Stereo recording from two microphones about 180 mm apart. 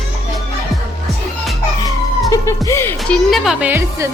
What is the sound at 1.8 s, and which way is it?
Music, 20° left (ahead or behind).